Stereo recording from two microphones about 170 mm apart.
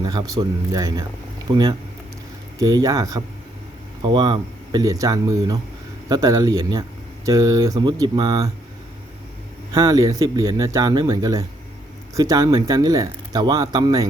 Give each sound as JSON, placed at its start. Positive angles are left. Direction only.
{"t": 0.0, "sound": "speech", "side_deg": -20}
{"t": 9.7, "sound": "speech", "side_deg": -20}